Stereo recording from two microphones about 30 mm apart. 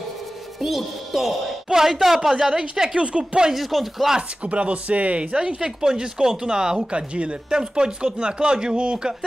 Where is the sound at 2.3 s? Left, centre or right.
Right.